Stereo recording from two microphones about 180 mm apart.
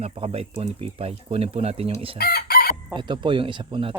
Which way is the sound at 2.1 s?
55° left (ahead or behind).